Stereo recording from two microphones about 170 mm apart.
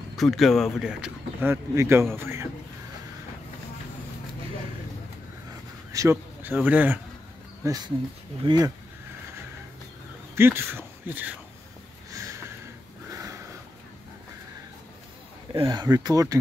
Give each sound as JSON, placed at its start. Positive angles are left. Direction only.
{"t": 0.2, "sound": "speech", "side_deg": 0}
{"t": 1.5, "sound": "a man's voice", "side_deg": -15}
{"t": 5.9, "sound": "a man's voice", "side_deg": -15}
{"t": 10.3, "sound": "speech", "side_deg": -15}
{"t": 12.1, "sound": "sniff", "side_deg": -20}
{"t": 13.1, "sound": "a sound", "side_deg": -20}
{"t": 15.5, "sound": "speech", "side_deg": -30}